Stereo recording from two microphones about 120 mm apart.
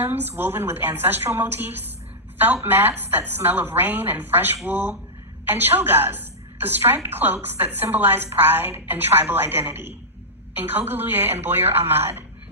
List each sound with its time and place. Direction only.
0.0 s a woman's voice: 15° right (ahead or behind)